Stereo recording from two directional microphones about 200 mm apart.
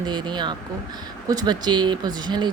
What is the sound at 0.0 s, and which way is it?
Speech, 20° right (ahead or behind).